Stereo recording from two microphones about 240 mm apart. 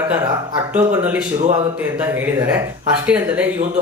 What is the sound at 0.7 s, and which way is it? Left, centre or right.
Speech, centre.